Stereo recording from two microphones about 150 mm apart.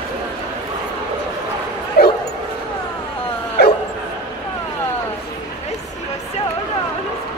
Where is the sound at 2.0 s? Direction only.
90° left.